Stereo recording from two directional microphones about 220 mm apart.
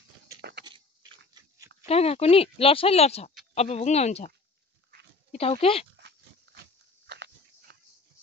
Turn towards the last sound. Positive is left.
turn(degrees=-50)  # may be behind; listen again after turning